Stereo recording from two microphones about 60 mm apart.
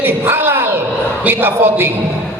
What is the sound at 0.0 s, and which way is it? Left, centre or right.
Bellow, right.